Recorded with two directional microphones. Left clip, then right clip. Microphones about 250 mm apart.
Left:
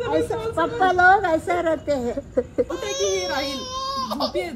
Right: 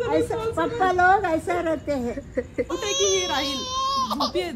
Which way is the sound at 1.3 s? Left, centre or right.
Centre.